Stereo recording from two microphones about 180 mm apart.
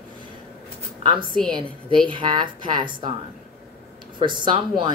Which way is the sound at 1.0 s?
30° right (ahead or behind).